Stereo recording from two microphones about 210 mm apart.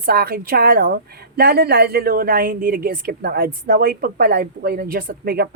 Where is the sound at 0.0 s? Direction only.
45° right (ahead or behind).